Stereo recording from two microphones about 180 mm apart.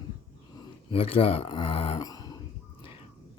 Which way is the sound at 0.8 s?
30° left (ahead or behind).